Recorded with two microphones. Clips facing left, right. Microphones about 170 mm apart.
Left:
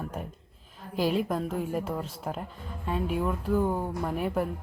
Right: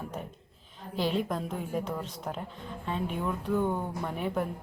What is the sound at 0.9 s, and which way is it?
Speech, 5° left (ahead or behind).